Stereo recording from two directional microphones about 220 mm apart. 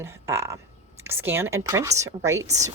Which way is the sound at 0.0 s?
15° right (ahead or behind).